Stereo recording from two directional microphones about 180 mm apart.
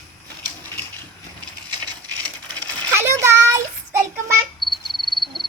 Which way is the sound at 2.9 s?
15° right (ahead or behind).